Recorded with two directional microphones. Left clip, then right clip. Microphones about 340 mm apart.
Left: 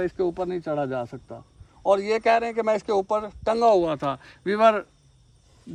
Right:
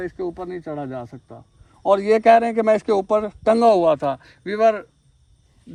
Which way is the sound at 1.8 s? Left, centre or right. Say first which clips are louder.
Right 6 dB; centre.